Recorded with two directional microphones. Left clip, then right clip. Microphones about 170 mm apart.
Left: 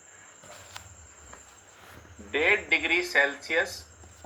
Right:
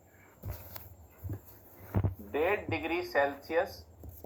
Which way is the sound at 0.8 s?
90° right.